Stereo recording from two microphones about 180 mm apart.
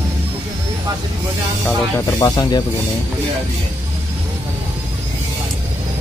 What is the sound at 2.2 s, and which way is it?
Speech, 20° left (ahead or behind).